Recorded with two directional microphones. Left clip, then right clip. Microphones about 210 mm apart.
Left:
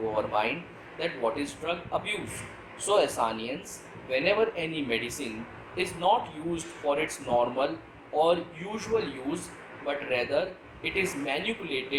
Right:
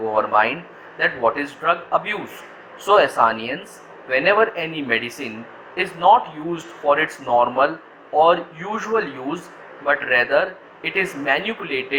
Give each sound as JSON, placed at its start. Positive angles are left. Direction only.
{"t": 0.2, "sound": "speech", "side_deg": -15}